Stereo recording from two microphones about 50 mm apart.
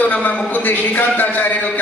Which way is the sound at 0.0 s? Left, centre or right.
Left.